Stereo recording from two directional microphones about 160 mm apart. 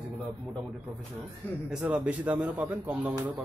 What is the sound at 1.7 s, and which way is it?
Speech, 5° right (ahead or behind).